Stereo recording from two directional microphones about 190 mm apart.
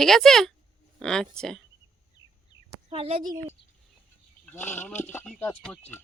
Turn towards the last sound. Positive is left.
turn(degrees=10)  # may be behind; listen again after turning